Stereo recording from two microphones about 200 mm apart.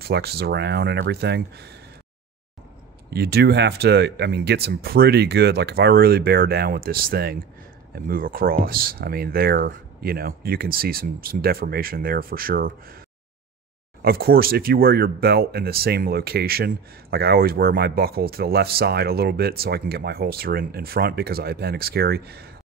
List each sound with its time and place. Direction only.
0.0 s speech: 55° right (ahead or behind)
3.1 s speech: 50° right (ahead or behind)
14.0 s speech: 50° right (ahead or behind)